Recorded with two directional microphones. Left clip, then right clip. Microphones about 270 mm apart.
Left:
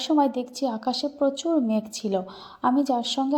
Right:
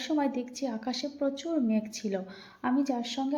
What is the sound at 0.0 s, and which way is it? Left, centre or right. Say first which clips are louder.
A woman's voice: left 8 dB; left.